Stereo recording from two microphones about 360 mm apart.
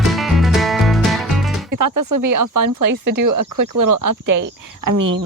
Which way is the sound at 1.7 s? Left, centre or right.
Right.